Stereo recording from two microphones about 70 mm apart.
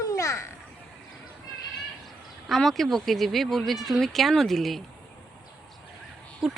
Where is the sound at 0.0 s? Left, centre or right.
Left.